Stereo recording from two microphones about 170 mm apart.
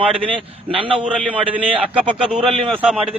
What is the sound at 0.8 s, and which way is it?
Speech, 30° right (ahead or behind).